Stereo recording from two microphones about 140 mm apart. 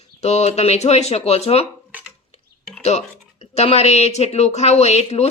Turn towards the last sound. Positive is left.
turn(degrees=50)  # may be behind; listen again after turning